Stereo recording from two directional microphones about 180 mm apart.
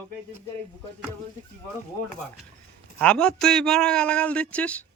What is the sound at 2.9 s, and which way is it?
A man's voice, 5° left (ahead or behind).